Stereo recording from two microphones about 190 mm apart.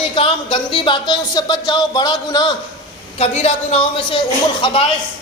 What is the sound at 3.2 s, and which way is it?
Speech, 35° left (ahead or behind).